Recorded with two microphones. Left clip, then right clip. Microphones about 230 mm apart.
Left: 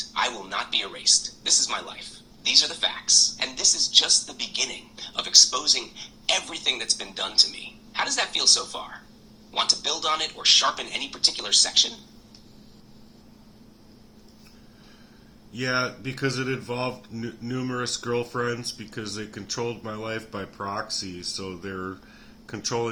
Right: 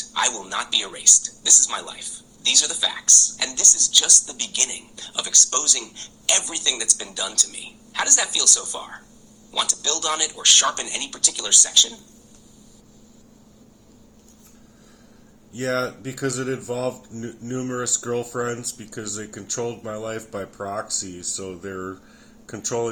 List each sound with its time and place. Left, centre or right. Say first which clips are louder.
0.1 s speech: right 4 dB; right
15.5 s speech: right 2 dB; centre